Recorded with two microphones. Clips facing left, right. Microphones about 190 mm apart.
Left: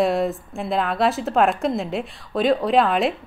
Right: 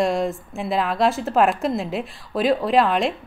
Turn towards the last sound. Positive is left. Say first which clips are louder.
# even
turn(degrees=0)  # may be behind; listen again after turning